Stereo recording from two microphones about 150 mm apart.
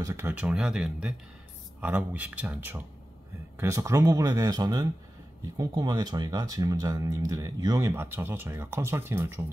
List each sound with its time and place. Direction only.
0.0 s speech: 20° right (ahead or behind)